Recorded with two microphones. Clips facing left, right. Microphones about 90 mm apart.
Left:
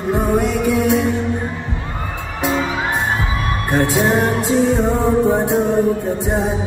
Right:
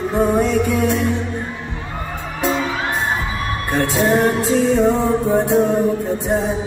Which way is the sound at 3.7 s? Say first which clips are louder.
Left 1 dB; 15° left (ahead or behind).